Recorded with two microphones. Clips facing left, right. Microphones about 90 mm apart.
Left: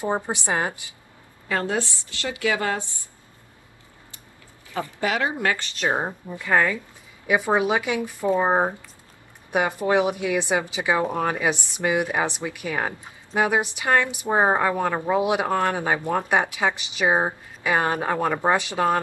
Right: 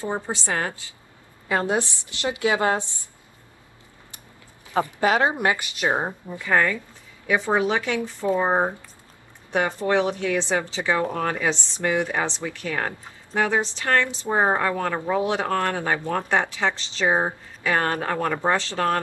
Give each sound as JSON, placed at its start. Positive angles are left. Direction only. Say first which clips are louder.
{"t": 0.0, "sound": "a woman's voice", "louder": "left 2 dB", "side_deg": 15}
{"t": 1.5, "sound": "a woman's voice", "louder": "right 2 dB", "side_deg": -20}
{"t": 4.7, "sound": "a woman's voice", "louder": "right 5 dB", "side_deg": -25}
{"t": 6.4, "sound": "a woman's voice", "louder": "even", "side_deg": 5}